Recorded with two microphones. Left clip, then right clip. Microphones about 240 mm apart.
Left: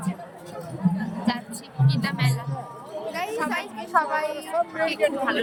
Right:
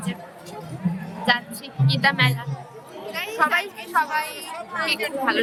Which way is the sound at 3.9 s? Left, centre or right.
Centre.